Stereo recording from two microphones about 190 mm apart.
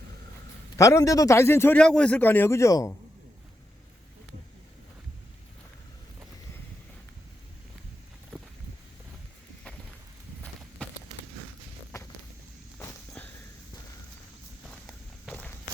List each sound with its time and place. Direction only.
0.8 s a man's voice: 15° left (ahead or behind)
10.8 s a sound: 5° left (ahead or behind)
11.9 s walk: 15° left (ahead or behind)
14.7 s walk: 5° left (ahead or behind)